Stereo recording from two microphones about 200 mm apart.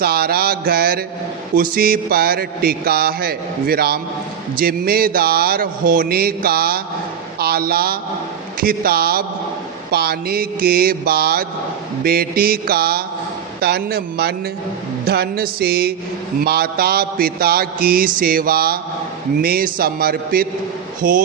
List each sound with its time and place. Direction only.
0.0 s a man's voice: 50° right (ahead or behind)